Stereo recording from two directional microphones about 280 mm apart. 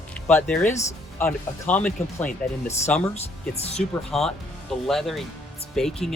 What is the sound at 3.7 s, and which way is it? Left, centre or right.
Speech, centre.